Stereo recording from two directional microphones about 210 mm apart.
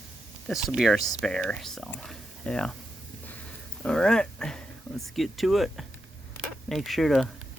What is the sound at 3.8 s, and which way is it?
Speech, 5° left (ahead or behind).